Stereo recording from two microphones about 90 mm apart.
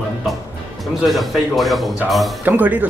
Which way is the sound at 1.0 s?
Centre (ahead or behind).